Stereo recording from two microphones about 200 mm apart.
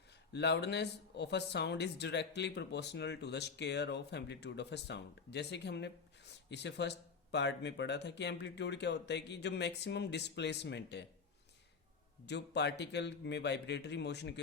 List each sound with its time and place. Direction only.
0.3 s speech: 55° left (ahead or behind)
12.2 s speech: 60° left (ahead or behind)